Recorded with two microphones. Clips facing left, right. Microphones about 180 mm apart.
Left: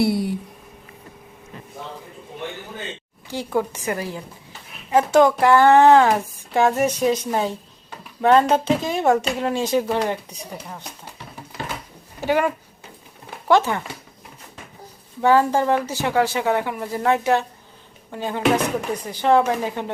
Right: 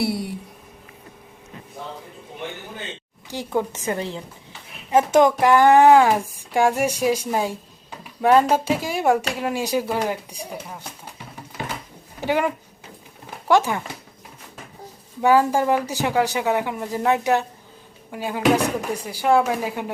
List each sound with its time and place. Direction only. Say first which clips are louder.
0.0 s a sound: left 4 dB; centre (ahead or behind)
3.2 s speech: left 1 dB; 15° right (ahead or behind)
12.2 s speech: left 2 dB; 15° right (ahead or behind)
13.5 s speech: left 1 dB; 15° right (ahead or behind)
15.2 s speech: even; 10° right (ahead or behind)